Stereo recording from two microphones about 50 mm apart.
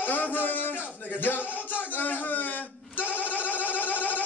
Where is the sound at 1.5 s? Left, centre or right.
Left.